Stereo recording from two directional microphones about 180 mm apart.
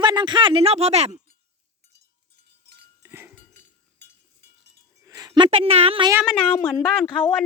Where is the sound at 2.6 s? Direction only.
65° right (ahead or behind).